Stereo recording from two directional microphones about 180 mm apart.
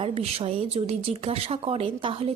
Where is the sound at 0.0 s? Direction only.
35° right (ahead or behind).